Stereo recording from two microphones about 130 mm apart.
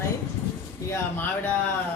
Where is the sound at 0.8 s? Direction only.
20° left (ahead or behind).